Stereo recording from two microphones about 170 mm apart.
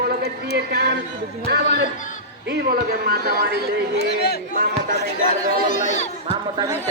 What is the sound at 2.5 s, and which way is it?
Speech, 60° right (ahead or behind).